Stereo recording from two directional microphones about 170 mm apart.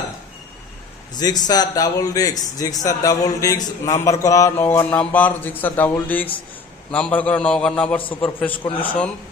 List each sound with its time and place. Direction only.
1.1 s a man's voice: 25° left (ahead or behind)